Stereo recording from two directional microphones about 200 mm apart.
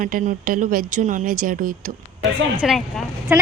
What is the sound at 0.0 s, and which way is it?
Speech, 45° right (ahead or behind).